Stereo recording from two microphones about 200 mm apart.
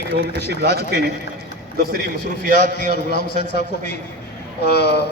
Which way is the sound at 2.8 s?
50° left (ahead or behind).